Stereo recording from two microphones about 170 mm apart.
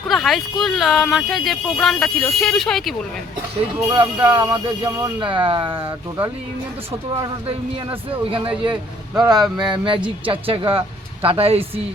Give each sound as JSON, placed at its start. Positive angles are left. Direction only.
{"t": 0.1, "sound": "speech", "side_deg": 0}
{"t": 3.9, "sound": "speech", "side_deg": -25}
{"t": 8.3, "sound": "speech", "side_deg": -30}